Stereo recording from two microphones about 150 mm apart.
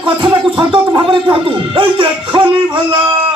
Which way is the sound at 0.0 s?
30° right (ahead or behind).